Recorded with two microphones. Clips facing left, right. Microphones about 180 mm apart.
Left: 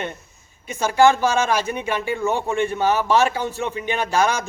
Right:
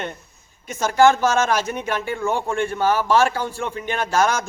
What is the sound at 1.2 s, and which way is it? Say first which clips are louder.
A man's voice: even; 10° left (ahead or behind).